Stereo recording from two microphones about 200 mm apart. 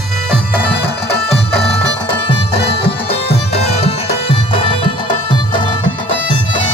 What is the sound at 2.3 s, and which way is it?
Music, 25° left (ahead or behind).